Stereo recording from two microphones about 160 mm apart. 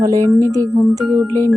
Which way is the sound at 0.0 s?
20° right (ahead or behind).